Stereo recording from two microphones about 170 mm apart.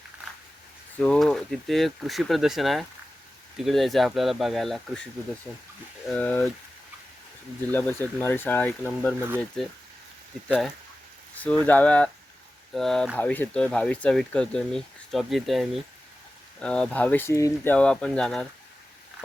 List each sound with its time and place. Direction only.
0.9 s speech: 5° left (ahead or behind)
6.1 s speech: 10° left (ahead or behind)
7.7 s speech: 10° left (ahead or behind)
11.6 s speech: 10° left (ahead or behind)